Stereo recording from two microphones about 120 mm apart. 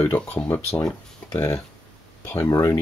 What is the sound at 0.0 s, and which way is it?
Speech, 15° left (ahead or behind).